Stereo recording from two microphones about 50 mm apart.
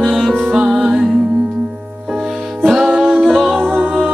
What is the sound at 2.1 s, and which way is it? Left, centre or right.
Music, centre.